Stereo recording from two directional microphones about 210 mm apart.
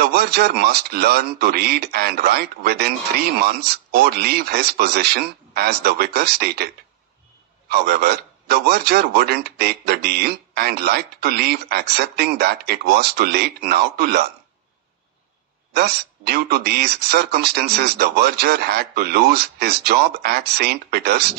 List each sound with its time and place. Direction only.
0.0 s speech: 50° right (ahead or behind)
7.7 s speech: 50° right (ahead or behind)
15.7 s speech: 50° right (ahead or behind)